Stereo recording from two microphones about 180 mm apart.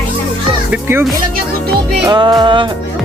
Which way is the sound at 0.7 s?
10° right (ahead or behind).